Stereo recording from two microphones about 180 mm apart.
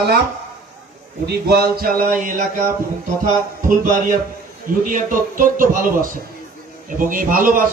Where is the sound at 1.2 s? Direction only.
60° right (ahead or behind).